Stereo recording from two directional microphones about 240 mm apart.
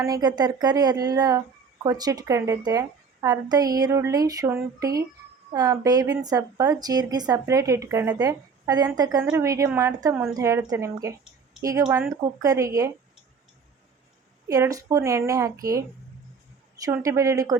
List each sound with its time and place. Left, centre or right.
0.0 s a woman's voice: centre
14.4 s a woman's voice: centre
16.8 s a woman's voice: centre